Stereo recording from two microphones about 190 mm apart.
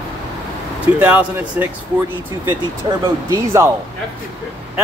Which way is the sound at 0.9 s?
10° right (ahead or behind).